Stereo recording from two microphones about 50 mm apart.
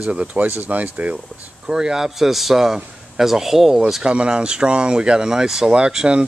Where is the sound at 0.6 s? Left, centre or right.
Right.